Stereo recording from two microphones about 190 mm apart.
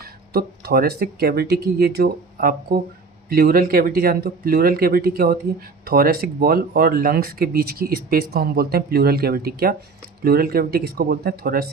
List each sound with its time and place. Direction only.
0.0 s speech: 55° right (ahead or behind)